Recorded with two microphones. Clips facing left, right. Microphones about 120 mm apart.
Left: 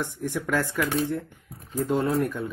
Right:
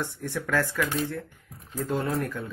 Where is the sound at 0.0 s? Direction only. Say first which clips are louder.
Left 2 dB; 15° left (ahead or behind).